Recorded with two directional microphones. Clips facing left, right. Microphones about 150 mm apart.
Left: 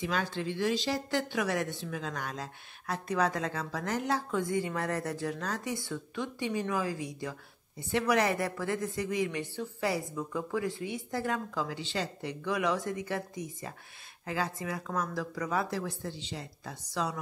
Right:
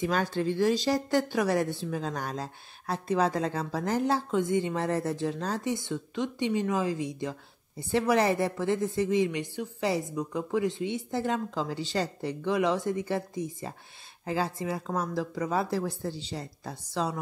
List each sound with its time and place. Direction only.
0.0 s a woman's voice: 45° right (ahead or behind); by 11.7 s 25° right (ahead or behind)
11.7 s a woman's voice: 40° right (ahead or behind)